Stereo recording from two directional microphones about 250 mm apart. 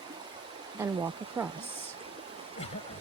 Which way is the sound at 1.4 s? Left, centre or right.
Centre.